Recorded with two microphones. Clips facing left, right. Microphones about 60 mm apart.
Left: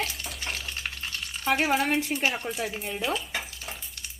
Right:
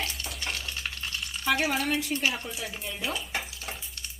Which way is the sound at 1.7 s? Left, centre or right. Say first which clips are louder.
Left 3 dB; left.